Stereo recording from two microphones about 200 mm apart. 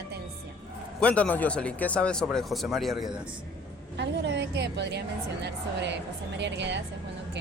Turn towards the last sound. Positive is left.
turn(degrees=-60)  # may be behind; listen again after turning